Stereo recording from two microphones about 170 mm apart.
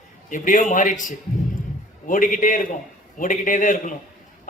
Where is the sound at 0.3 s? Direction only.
50° left (ahead or behind).